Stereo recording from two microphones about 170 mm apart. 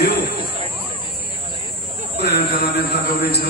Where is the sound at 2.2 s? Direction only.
75° left (ahead or behind).